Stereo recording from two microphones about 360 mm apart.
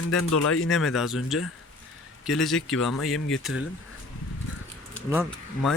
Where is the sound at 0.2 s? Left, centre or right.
Left.